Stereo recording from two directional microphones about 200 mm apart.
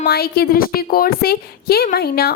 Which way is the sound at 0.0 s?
50° left (ahead or behind).